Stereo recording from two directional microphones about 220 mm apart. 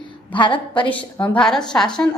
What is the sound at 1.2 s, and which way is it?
Speech, 5° left (ahead or behind).